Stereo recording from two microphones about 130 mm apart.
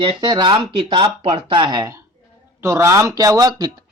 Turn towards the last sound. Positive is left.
turn(degrees=-30)  # may be behind; listen again after turning